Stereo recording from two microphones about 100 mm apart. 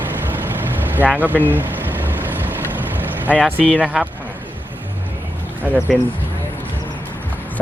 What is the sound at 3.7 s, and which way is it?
Speech, 10° right (ahead or behind).